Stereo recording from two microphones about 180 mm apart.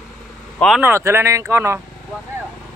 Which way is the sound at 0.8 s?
15° right (ahead or behind).